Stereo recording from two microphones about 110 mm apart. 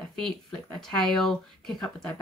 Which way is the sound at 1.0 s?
5° left (ahead or behind).